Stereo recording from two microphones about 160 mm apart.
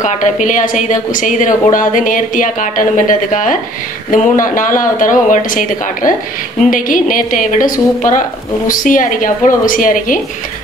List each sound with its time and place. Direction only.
0.0 s a woman's voice: 50° left (ahead or behind)